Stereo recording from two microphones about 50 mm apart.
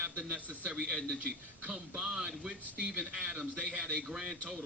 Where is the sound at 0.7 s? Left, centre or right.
Centre.